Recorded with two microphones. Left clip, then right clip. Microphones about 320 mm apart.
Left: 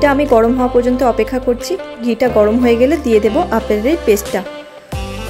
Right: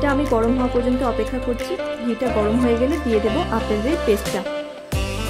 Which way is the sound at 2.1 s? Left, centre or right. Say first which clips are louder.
Left 10 dB; centre.